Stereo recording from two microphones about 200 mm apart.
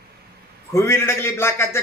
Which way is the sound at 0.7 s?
10° left (ahead or behind).